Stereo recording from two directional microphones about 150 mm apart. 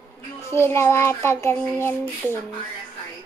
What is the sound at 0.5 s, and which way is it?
Child singing, 15° left (ahead or behind).